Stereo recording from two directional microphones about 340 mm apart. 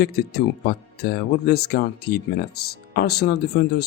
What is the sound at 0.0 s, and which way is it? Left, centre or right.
Speech, left.